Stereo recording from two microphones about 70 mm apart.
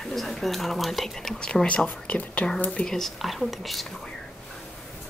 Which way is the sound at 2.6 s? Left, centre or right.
Centre.